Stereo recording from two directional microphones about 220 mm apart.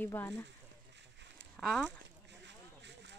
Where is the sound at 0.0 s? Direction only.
10° left (ahead or behind).